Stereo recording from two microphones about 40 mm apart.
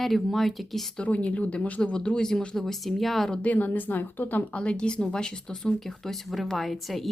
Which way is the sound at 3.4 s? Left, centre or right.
Left.